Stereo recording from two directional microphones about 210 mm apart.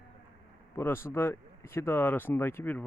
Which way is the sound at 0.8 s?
10° left (ahead or behind).